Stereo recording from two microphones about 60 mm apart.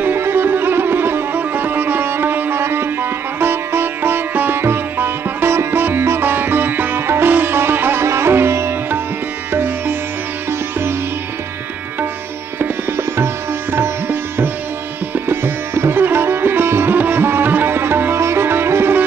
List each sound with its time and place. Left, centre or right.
0.0 s music: right
8.0 s sitar: right
12.5 s sitar: right